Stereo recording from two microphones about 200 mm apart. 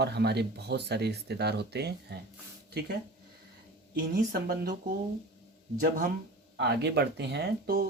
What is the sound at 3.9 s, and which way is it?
Speech, 50° right (ahead or behind).